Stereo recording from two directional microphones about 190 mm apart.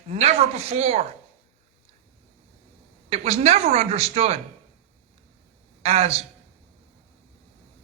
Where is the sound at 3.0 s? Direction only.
35° right (ahead or behind).